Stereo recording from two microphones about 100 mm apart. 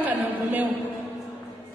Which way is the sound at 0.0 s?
15° right (ahead or behind).